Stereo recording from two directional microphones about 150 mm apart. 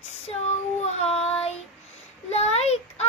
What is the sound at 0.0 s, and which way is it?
Child singing, 45° left (ahead or behind).